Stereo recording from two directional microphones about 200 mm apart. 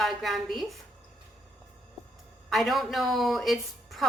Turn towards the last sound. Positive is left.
turn(degrees=0)  # may be behind; listen again after turning